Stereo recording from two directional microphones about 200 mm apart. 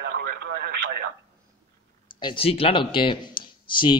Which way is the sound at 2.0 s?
25° left (ahead or behind).